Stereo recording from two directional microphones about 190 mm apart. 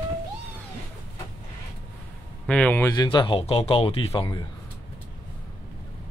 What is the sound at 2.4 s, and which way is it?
Speech, 5° left (ahead or behind).